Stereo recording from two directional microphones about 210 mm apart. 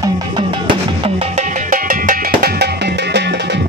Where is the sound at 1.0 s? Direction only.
30° right (ahead or behind).